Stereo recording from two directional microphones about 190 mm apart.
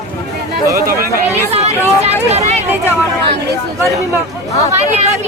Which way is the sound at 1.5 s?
35° right (ahead or behind).